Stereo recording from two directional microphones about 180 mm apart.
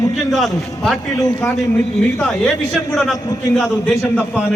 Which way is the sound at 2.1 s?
5° left (ahead or behind).